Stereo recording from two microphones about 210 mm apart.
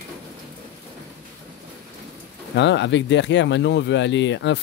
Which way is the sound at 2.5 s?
60° left (ahead or behind).